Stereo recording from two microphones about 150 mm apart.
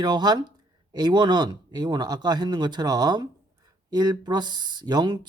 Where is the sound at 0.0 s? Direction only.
30° right (ahead or behind).